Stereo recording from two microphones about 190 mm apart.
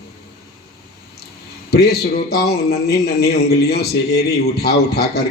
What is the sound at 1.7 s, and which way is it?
A man's voice, 55° left (ahead or behind).